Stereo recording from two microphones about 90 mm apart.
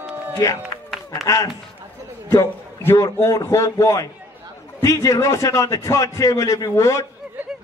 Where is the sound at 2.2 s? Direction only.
25° left (ahead or behind).